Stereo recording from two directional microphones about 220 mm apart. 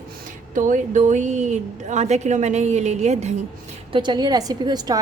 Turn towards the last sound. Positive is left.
turn(degrees=-15)  # may be behind; listen again after turning